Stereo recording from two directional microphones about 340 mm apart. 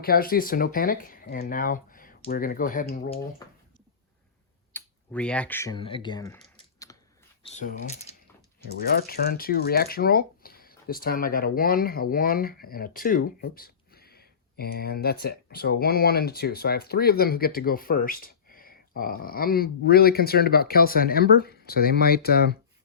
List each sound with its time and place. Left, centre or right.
0.0 s speech: left
4.7 s speech: centre
7.4 s speech: left